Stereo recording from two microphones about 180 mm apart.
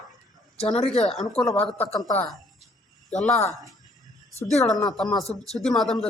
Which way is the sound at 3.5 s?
Centre (ahead or behind).